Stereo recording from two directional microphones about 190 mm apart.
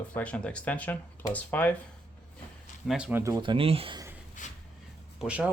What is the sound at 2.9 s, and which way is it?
Speech, 5° right (ahead or behind).